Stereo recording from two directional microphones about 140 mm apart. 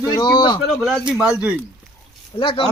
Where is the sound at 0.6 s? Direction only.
Centre (ahead or behind).